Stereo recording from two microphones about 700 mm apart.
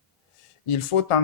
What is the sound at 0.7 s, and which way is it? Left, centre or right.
Speech, left.